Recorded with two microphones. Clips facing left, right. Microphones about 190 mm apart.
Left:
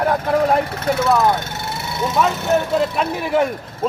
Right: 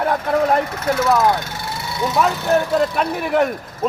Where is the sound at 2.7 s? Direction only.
Centre (ahead or behind).